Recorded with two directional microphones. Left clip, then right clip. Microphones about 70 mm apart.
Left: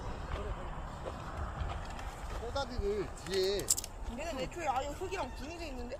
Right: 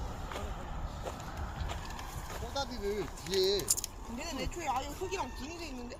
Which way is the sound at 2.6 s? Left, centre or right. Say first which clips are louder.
Even; left.